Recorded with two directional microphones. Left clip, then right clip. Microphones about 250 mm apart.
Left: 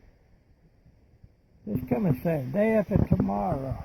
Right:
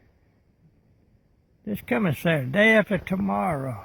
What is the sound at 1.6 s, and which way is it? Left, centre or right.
Speech, centre.